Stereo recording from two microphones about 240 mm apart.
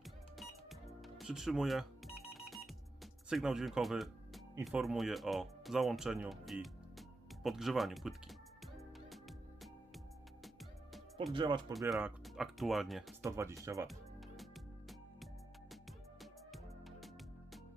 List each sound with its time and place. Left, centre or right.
0.0 s music: centre
4.6 s speech: centre
9.0 s music: centre
11.3 s speech: centre
11.9 s speech: centre
13.2 s speech: centre
13.8 s music: centre